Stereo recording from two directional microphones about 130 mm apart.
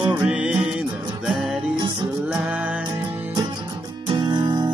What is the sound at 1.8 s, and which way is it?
Music, 35° right (ahead or behind).